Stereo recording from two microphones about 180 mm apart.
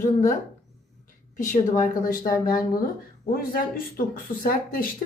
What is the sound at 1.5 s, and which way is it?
A woman's voice, 45° left (ahead or behind).